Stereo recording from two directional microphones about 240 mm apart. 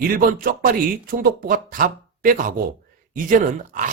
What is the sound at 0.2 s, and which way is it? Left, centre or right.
Speech, right.